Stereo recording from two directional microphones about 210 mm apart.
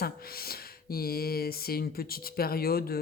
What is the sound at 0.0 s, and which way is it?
Speech, 45° left (ahead or behind).